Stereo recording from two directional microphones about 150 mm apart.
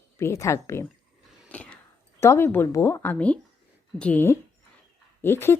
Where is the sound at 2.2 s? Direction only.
15° left (ahead or behind).